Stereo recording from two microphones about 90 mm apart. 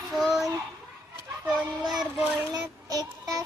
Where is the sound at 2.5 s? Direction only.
45° right (ahead or behind).